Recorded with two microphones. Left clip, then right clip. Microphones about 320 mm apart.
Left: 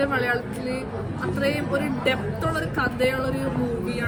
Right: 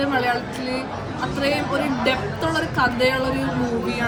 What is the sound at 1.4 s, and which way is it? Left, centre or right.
A woman's voice, centre.